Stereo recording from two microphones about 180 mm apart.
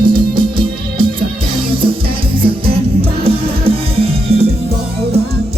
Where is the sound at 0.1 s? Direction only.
25° right (ahead or behind).